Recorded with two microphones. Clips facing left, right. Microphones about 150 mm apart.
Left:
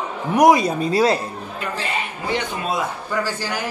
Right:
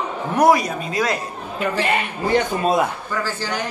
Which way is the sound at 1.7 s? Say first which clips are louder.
Right 5 dB; 60° right (ahead or behind).